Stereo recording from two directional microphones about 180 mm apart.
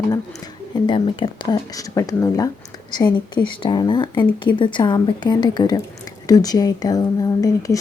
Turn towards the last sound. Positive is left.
turn(degrees=20)  # may be behind; listen again after turning